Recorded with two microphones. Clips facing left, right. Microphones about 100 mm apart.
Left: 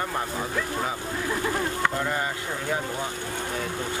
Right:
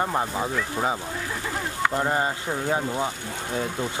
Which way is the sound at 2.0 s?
30° right (ahead or behind).